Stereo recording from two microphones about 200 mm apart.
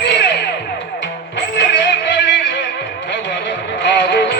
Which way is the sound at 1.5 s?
60° left (ahead or behind).